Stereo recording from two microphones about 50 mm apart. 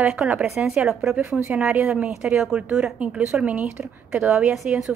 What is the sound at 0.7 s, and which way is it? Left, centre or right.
Speech, centre.